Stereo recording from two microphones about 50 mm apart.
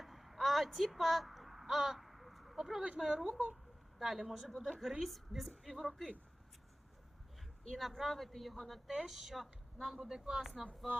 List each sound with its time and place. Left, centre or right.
0.0 s a sound: centre
3.1 s speech: centre
3.3 s speech: right
3.9 s speech: centre
7.8 s speech: centre